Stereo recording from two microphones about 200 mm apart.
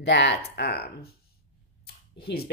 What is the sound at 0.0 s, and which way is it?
Speech, 60° left (ahead or behind).